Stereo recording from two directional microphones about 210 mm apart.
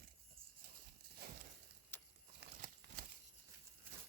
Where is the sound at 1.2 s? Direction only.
50° right (ahead or behind).